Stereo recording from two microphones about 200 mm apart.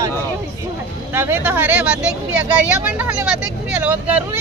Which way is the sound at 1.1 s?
10° right (ahead or behind).